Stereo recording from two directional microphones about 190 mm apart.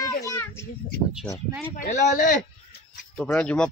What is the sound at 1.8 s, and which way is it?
Speech, 40° left (ahead or behind).